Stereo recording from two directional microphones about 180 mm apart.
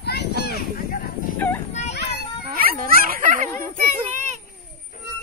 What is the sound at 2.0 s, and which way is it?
Children playing, 65° left (ahead or behind).